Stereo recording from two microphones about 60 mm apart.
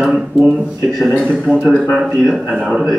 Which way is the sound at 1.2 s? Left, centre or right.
Right.